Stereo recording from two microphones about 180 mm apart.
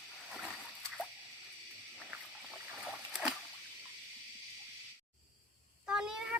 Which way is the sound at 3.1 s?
Centre (ahead or behind).